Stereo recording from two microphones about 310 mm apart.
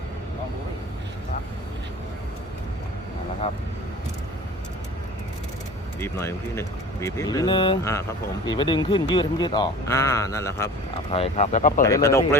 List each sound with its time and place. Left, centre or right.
6.0 s speech: centre
11.1 s speech: centre
11.8 s speech: centre